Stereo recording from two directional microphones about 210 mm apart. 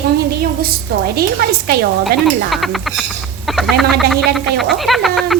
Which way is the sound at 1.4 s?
50° right (ahead or behind).